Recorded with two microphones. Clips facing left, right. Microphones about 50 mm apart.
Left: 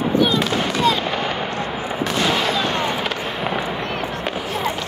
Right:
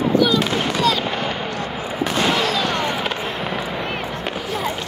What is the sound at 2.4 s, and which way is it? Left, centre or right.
Fireworks, left.